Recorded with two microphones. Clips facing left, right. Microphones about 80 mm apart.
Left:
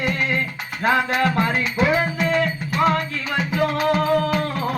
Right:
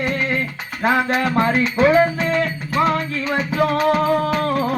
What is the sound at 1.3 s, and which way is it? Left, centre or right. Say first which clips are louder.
Music: right 4 dB; right.